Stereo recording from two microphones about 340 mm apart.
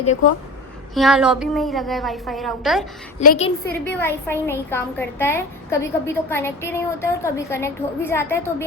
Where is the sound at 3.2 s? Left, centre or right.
Left.